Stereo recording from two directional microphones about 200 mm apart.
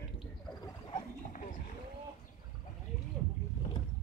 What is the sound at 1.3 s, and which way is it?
Wild animals, 40° left (ahead or behind).